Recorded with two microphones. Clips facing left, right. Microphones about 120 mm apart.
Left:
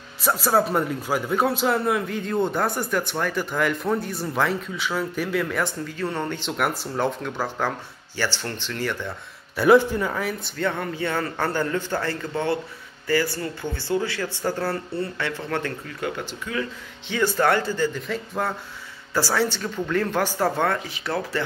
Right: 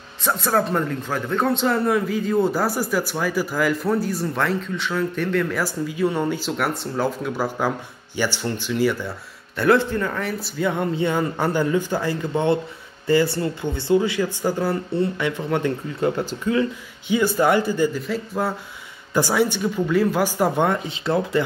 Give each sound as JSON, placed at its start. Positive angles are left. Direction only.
{"t": 0.2, "sound": "a man's voice", "side_deg": 5}
{"t": 6.5, "sound": "a man's voice", "side_deg": 0}
{"t": 9.6, "sound": "a man's voice", "side_deg": 10}
{"t": 10.5, "sound": "speech", "side_deg": -10}
{"t": 16.0, "sound": "speech", "side_deg": -35}
{"t": 17.1, "sound": "a man's voice", "side_deg": -10}
{"t": 19.1, "sound": "speech", "side_deg": -15}